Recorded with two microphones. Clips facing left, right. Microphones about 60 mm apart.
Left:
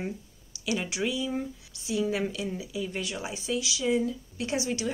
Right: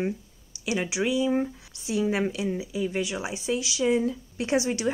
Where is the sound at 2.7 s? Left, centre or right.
Centre.